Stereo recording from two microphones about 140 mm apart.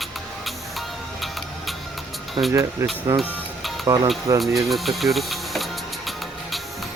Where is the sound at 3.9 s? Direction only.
30° right (ahead or behind).